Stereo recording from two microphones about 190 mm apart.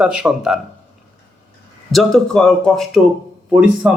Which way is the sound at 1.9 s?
Centre (ahead or behind).